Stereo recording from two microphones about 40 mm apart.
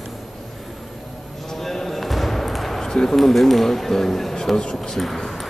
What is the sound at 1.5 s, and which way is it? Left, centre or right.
Basketball bounce, centre.